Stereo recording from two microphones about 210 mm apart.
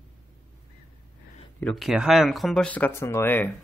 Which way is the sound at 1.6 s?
Centre (ahead or behind).